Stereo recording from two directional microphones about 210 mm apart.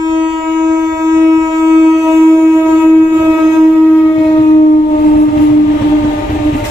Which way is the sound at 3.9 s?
10° left (ahead or behind).